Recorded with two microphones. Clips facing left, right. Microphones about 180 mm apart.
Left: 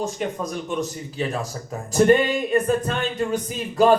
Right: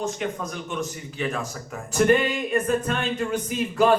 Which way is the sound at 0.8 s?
35° left (ahead or behind).